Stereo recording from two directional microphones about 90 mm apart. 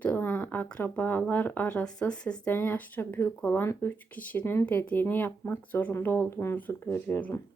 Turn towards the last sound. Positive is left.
turn(degrees=25)  # may be behind; listen again after turning